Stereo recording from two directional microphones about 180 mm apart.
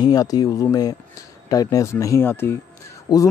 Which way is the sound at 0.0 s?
20° left (ahead or behind).